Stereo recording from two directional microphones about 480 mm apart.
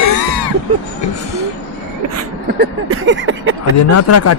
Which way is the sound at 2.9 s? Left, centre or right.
Right.